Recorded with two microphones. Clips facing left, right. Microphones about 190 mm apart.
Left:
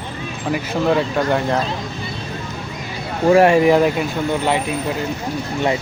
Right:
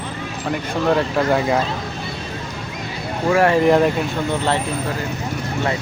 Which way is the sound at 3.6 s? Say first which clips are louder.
Left 1 dB; 5° left (ahead or behind).